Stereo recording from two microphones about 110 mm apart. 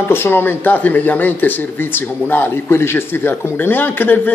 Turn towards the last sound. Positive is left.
turn(degrees=20)  # may be behind; listen again after turning